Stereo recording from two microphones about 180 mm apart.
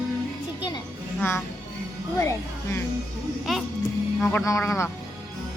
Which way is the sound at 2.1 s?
15° left (ahead or behind).